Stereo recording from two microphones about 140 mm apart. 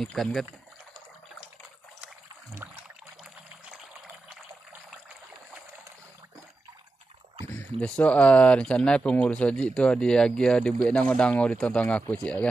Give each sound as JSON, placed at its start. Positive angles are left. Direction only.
{"t": 0.0, "sound": "speech", "side_deg": 5}
{"t": 2.5, "sound": "a sound", "side_deg": -15}
{"t": 7.5, "sound": "speech", "side_deg": 10}